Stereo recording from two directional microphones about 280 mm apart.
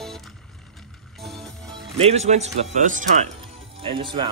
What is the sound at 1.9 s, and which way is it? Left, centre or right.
A man's voice, right.